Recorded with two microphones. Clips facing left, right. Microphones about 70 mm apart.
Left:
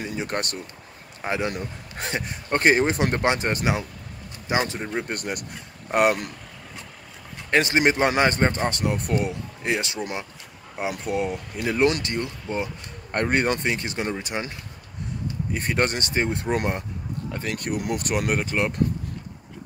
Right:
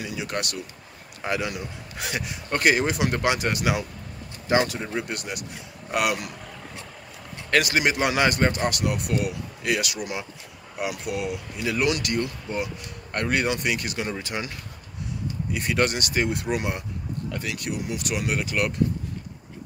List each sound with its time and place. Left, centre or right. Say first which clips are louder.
0.0 s speech: left 2 dB; left
4.9 s speech: left 2 dB; left
7.5 s speech: left 2 dB; left
15.5 s speech: even; left